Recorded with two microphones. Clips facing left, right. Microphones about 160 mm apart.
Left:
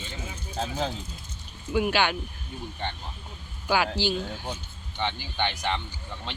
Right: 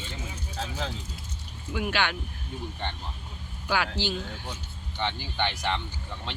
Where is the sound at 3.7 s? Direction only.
10° left (ahead or behind).